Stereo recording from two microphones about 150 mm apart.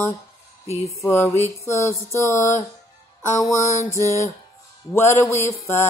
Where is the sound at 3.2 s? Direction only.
20° left (ahead or behind).